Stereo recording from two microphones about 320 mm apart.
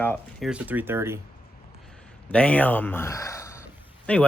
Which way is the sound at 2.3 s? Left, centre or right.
Centre.